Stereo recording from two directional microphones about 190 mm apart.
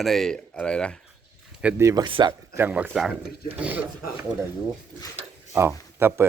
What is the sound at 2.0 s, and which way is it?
Speech, 25° right (ahead or behind).